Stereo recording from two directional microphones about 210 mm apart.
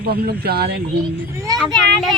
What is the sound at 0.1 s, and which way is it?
Speech, 50° right (ahead or behind).